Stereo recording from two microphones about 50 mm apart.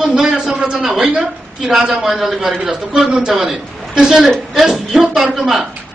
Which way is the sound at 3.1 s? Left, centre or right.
Centre.